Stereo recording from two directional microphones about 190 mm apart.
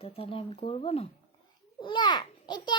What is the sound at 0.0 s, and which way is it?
A child's voice, 30° left (ahead or behind).